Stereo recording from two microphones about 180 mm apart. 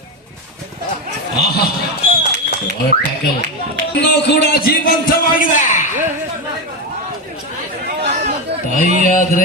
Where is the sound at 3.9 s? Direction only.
65° left (ahead or behind).